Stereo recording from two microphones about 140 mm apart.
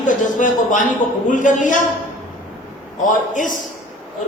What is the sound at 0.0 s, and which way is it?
A man's voice, 65° left (ahead or behind).